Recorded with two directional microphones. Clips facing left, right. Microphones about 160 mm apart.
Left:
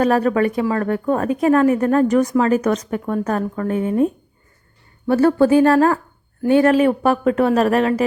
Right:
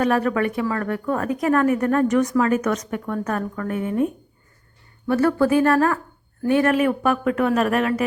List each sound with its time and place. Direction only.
0.0 s speech: 30° left (ahead or behind)